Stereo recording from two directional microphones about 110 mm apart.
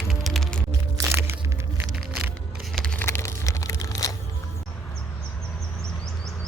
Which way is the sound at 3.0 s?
25° left (ahead or behind).